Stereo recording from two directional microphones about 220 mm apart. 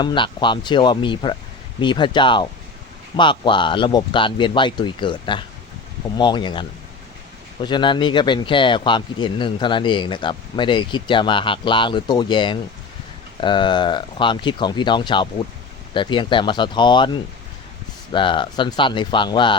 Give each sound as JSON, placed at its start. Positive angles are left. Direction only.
{"t": 0.0, "sound": "speech", "side_deg": 20}